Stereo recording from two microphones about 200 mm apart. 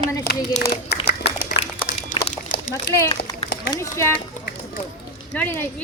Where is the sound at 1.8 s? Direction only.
40° left (ahead or behind).